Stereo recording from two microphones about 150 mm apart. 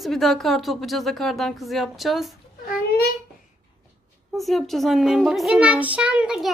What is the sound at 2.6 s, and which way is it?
Speech, 90° left.